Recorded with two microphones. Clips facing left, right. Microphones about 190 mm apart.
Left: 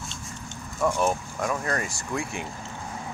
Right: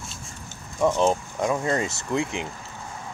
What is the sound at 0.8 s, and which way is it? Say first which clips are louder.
Speech: right 3 dB; 25° right (ahead or behind).